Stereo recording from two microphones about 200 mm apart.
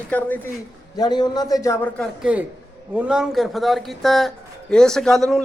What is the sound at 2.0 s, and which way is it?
A man's voice, 5° right (ahead or behind).